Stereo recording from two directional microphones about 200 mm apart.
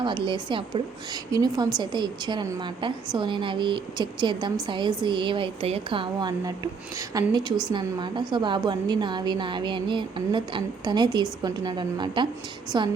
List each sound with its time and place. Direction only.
0.0 s a woman's voice: 25° right (ahead or behind)